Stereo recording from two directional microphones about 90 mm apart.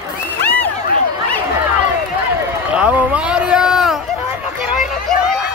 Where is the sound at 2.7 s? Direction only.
10° right (ahead or behind).